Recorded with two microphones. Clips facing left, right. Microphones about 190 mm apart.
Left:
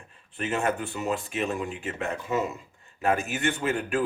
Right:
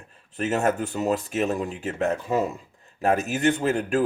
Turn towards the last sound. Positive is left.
turn(degrees=-40)  # may be behind; listen again after turning